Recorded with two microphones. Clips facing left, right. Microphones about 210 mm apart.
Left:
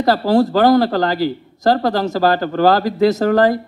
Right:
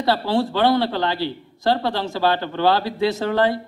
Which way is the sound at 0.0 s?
40° left (ahead or behind).